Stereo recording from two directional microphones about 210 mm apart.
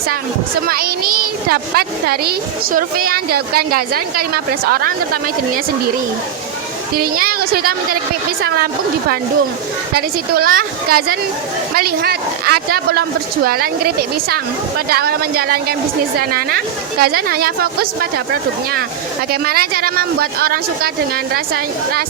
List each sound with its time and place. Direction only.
0.7 s a child's voice: 45° right (ahead or behind)
6.9 s a child's voice: 45° right (ahead or behind)